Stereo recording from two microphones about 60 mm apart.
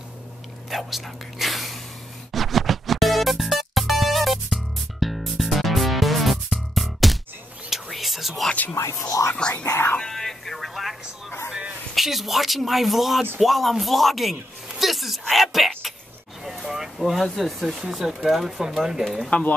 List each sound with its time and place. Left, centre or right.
0.7 s speech: centre
2.3 s music: centre
7.7 s whispering: centre
8.7 s a sound: left
9.6 s music: left
9.9 s a sound: centre
11.9 s a woman's voice: centre
14.7 s a sound: centre
16.4 s speech: centre